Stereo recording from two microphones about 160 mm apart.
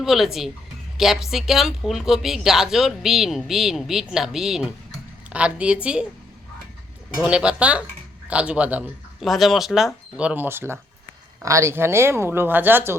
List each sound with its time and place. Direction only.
0.0 s speech: centre (ahead or behind)
7.2 s speech: 5° right (ahead or behind)